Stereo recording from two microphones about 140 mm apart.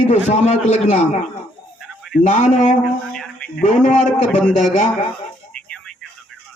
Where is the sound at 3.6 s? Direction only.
65° left (ahead or behind).